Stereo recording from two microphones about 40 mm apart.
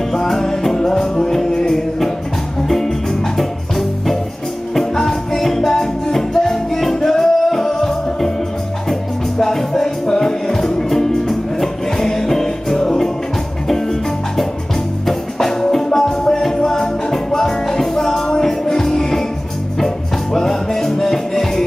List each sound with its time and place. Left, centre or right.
0.1 s music: centre
9.4 s music: centre
15.0 s music: centre
20.3 s music: centre